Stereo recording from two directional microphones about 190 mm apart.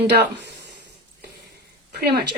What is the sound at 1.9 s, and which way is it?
Speech, 55° right (ahead or behind).